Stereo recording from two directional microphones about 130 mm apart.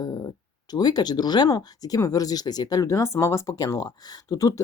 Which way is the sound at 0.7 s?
30° left (ahead or behind).